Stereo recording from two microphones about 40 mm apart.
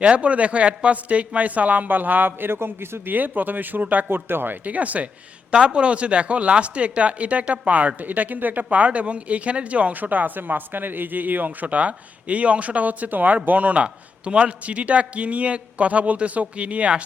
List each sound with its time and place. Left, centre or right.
0.0 s speech: right
3.1 s speech: right
4.1 s speech: right
4.6 s speech: right
5.5 s speech: right
13.8 s speech: right